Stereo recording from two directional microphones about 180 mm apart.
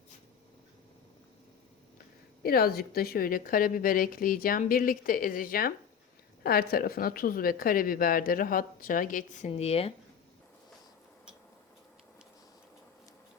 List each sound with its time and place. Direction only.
2.4 s a woman's voice: 55° left (ahead or behind)
9.5 s speech: 35° left (ahead or behind)